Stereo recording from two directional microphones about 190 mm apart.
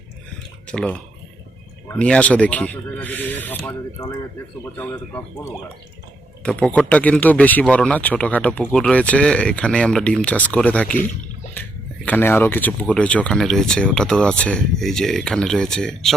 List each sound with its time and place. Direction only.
0.7 s speech: 5° left (ahead or behind)
6.4 s speech: 5° left (ahead or behind)
12.0 s speech: 10° left (ahead or behind)